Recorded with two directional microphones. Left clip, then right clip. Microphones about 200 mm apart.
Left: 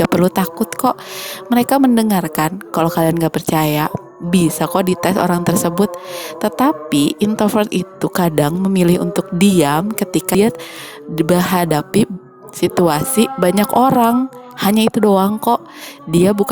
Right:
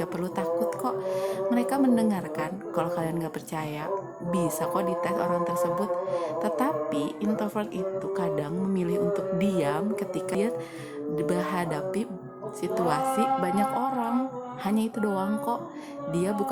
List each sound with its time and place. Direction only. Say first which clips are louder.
0.0 s speech: left 15 dB; 45° left (ahead or behind)